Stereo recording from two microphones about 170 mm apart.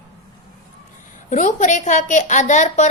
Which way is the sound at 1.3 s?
45° left (ahead or behind).